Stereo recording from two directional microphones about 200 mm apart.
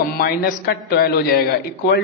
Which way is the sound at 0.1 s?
50° left (ahead or behind).